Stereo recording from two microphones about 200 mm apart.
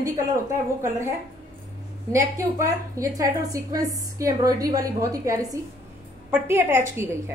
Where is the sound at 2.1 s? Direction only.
15° right (ahead or behind).